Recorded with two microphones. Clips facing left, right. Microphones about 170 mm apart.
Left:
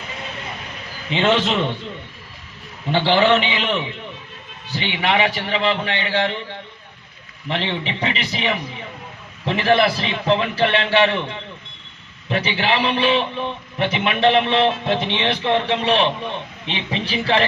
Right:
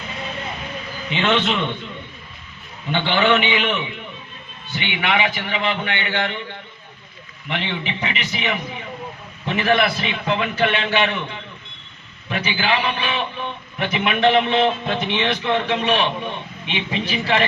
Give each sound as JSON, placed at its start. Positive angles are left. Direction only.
{"t": 1.1, "sound": "a man's voice", "side_deg": 35}
{"t": 2.9, "sound": "a man's voice", "side_deg": 35}
{"t": 12.3, "sound": "a man's voice", "side_deg": 30}